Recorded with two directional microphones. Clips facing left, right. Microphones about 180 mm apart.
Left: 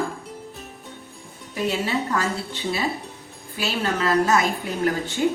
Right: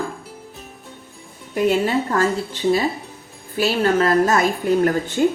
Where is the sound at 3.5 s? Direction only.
45° right (ahead or behind).